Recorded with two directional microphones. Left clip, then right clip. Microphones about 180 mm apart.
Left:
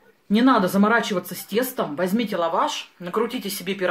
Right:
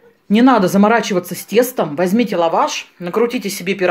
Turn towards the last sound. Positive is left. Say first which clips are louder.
# right 8 dB
turn(degrees=-30)  # may be behind; listen again after turning